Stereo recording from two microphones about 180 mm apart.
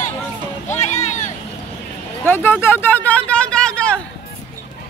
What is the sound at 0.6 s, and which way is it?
Music, 40° left (ahead or behind).